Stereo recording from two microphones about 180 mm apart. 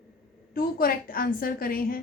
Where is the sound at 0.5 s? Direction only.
55° left (ahead or behind).